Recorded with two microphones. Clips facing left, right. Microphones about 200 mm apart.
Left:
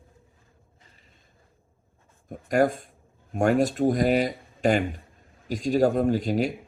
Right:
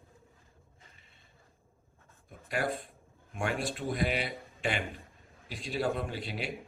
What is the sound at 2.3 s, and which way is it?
Speech, 45° left (ahead or behind).